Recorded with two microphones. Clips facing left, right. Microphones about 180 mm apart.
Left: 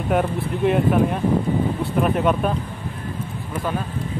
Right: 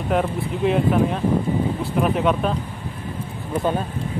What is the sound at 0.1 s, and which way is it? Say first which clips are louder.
Speech: left 1 dB; centre (ahead or behind).